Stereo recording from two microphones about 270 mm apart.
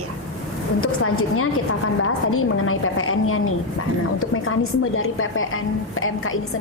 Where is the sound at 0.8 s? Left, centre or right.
Left.